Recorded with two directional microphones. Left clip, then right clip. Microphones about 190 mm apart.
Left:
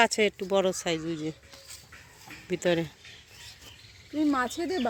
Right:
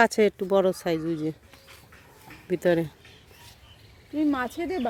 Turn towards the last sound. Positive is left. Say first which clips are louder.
# right 1 dB
turn(degrees=-10)  # may be behind; listen again after turning